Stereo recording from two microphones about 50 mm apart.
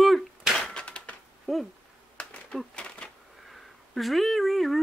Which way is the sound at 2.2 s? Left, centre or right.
Left.